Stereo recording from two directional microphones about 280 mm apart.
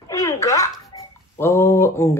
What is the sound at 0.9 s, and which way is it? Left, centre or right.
Fowl, centre.